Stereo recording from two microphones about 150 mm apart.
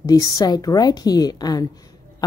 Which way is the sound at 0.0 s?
25° left (ahead or behind).